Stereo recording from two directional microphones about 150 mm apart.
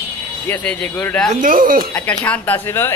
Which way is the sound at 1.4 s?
65° right (ahead or behind).